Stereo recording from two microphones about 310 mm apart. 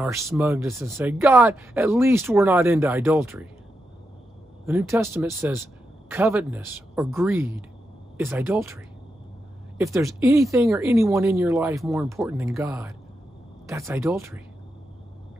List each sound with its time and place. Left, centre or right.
0.0 s speech: centre
4.6 s speech: centre
9.8 s speech: centre